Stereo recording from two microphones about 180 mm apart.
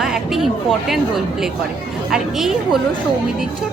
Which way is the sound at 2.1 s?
Centre (ahead or behind).